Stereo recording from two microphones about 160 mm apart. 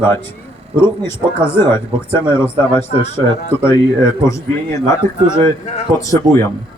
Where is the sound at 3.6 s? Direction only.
15° left (ahead or behind).